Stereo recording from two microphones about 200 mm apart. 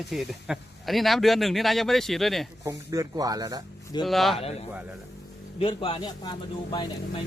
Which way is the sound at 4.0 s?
Centre (ahead or behind).